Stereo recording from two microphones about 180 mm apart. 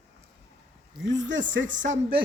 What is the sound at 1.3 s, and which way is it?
Speech, 90° right.